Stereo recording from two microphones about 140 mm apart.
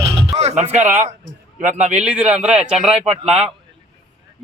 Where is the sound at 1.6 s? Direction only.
55° right (ahead or behind).